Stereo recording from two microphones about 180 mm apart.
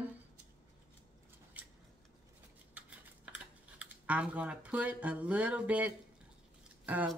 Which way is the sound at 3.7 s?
10° right (ahead or behind).